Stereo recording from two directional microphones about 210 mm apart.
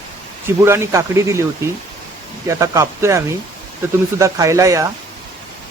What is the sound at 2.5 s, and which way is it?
Speech, 15° right (ahead or behind).